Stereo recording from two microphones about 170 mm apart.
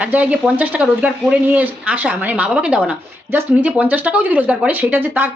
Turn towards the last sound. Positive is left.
turn(degrees=-10)  # may be behind; listen again after turning